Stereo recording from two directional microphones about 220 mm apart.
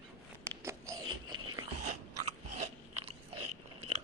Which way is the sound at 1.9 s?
30° right (ahead or behind).